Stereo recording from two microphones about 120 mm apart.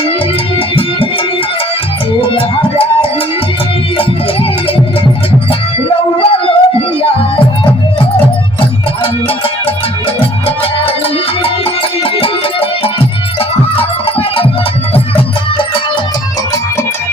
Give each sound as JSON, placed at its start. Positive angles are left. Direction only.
{"t": 2.3, "sound": "music", "side_deg": 45}
{"t": 6.1, "sound": "howl", "side_deg": 50}
{"t": 10.2, "sound": "music", "side_deg": 50}